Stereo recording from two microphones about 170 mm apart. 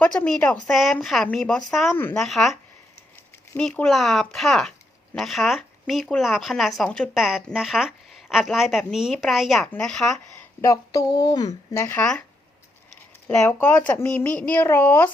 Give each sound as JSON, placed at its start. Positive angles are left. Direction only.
{"t": 0.0, "sound": "speech", "side_deg": 5}
{"t": 2.0, "sound": "speech", "side_deg": 10}
{"t": 2.2, "sound": "speech", "side_deg": 0}
{"t": 10.6, "sound": "speech", "side_deg": 20}
{"t": 13.2, "sound": "speech", "side_deg": 10}